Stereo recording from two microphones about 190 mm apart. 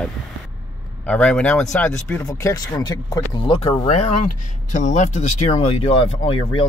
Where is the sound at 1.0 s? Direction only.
5° left (ahead or behind).